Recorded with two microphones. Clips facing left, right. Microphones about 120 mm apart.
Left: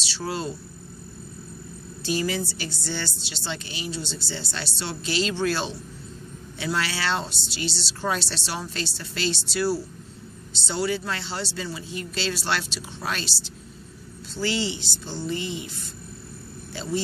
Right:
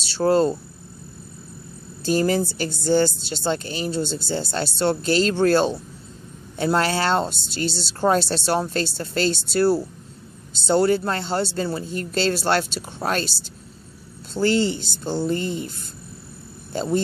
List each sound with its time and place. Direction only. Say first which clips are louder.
0.1 s speech: right 12 dB; 45° right (ahead or behind)
2.0 s speech: right 7 dB; 45° right (ahead or behind)
14.3 s speech: right 7 dB; 50° right (ahead or behind)
16.7 s speech: right 6 dB; 45° right (ahead or behind)